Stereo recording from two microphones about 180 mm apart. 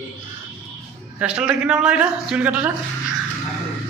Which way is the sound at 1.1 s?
5° right (ahead or behind).